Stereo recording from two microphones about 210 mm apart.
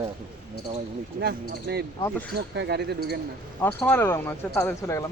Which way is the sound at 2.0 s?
5° left (ahead or behind).